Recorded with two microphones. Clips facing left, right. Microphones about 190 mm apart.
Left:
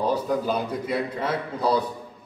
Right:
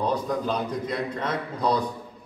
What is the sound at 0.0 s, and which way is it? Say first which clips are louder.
A man's voice: left 2 dB; 5° left (ahead or behind).